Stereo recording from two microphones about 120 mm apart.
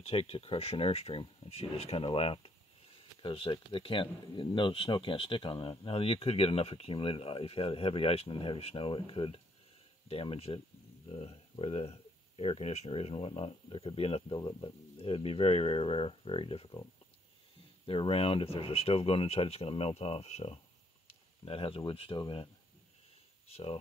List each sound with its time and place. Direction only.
0.0 s speech: 55° left (ahead or behind)
17.8 s speech: 50° left (ahead or behind)
23.5 s speech: 55° left (ahead or behind)